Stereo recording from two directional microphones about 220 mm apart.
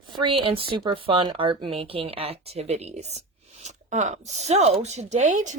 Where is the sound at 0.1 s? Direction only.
20° right (ahead or behind).